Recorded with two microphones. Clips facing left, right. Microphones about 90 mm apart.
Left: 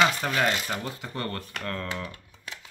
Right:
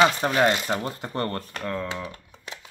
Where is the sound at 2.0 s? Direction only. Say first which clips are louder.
Right 2 dB; 20° right (ahead or behind).